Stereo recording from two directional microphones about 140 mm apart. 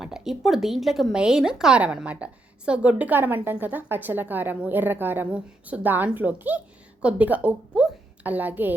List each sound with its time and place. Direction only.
0.0 s a woman's voice: 5° right (ahead or behind)